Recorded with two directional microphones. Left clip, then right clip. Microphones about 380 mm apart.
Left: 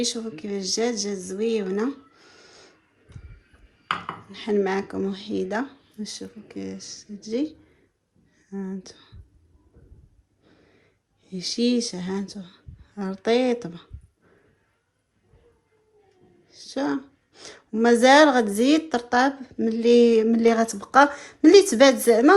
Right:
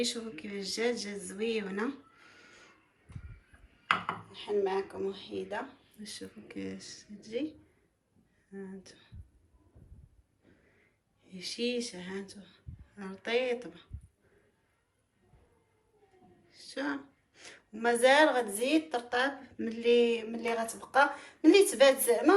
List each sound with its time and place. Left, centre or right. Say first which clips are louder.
0.0 s speech: left 7 dB; centre
4.3 s speech: left 8 dB; centre
8.8 s speech: left 10 dB; centre
11.2 s speech: left 10 dB; centre
16.5 s speech: left 9 dB; centre